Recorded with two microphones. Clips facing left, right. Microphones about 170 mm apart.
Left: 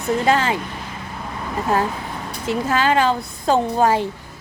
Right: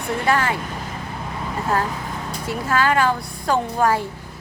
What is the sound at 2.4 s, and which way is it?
A woman's voice, 20° left (ahead or behind).